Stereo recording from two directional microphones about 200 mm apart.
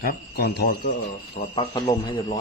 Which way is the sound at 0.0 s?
50° left (ahead or behind).